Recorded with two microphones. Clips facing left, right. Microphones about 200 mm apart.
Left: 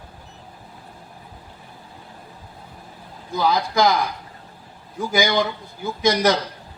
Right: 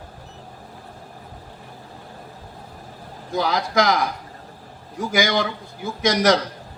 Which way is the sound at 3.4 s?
80° right.